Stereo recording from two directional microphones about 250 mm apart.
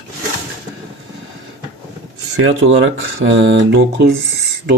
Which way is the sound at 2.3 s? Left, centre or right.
Right.